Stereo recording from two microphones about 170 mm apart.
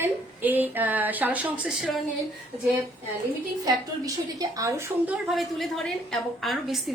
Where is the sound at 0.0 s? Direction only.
10° right (ahead or behind).